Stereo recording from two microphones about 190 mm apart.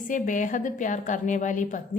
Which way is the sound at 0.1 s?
40° left (ahead or behind).